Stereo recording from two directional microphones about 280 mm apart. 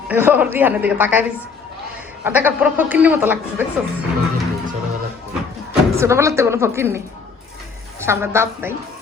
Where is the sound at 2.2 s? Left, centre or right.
Centre.